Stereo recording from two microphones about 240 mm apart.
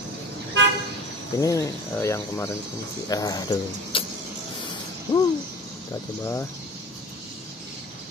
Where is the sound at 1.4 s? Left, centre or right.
Centre.